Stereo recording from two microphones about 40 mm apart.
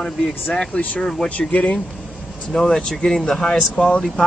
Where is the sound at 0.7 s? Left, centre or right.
Left.